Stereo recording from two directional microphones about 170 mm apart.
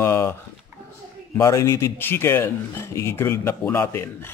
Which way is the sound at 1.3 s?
15° left (ahead or behind).